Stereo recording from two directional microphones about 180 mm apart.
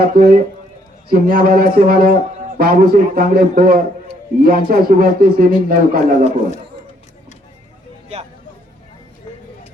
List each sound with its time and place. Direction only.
0.0 s a man's voice: 55° right (ahead or behind)